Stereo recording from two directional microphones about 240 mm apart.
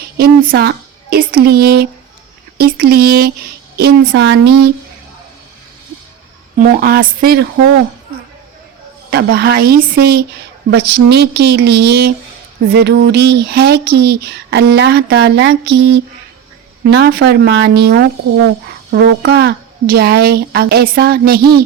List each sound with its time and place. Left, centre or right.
0.2 s speech: right
6.6 s speech: right
9.0 s speech: right